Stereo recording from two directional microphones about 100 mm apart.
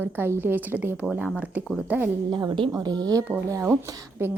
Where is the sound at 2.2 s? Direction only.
50° right (ahead or behind).